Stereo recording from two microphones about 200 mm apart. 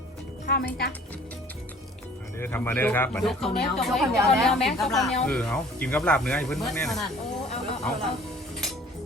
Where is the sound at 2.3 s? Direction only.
10° left (ahead or behind).